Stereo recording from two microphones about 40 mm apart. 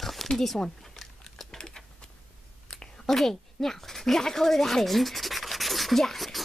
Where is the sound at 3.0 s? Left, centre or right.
Centre.